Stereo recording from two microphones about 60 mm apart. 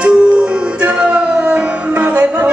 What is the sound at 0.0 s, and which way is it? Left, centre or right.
Music, centre.